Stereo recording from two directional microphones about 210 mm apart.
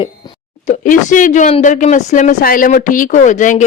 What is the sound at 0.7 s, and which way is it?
A woman's voice, 35° left (ahead or behind).